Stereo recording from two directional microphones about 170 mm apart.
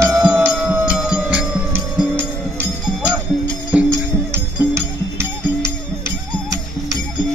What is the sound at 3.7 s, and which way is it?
Music, 15° right (ahead or behind).